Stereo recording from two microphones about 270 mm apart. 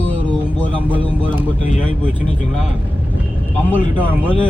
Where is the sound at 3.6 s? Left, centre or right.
Centre.